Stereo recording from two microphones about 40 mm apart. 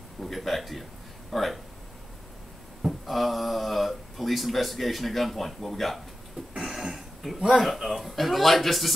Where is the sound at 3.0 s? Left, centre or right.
Centre.